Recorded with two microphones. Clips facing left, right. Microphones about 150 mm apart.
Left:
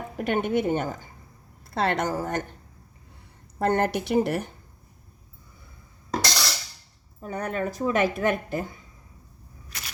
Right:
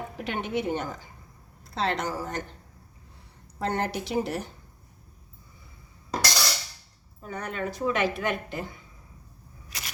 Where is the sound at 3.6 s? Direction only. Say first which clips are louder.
Left 5 dB; 55° left (ahead or behind).